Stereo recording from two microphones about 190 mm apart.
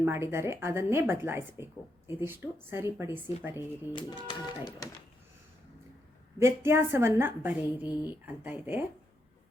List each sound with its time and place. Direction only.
0.0 s a woman's voice: 10° right (ahead or behind)
3.5 s speech: 25° left (ahead or behind)
6.4 s a woman's voice: 15° right (ahead or behind)